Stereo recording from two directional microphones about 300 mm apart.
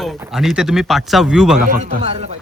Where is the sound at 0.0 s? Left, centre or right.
Centre.